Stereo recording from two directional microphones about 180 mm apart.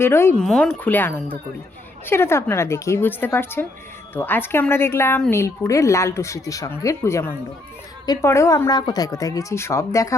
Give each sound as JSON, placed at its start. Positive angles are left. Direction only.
{"t": 0.0, "sound": "a woman's voice", "side_deg": 15}
{"t": 0.4, "sound": "a woman's voice", "side_deg": 0}